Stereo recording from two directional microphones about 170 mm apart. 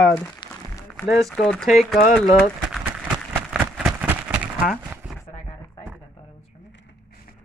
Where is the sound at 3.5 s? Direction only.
10° right (ahead or behind).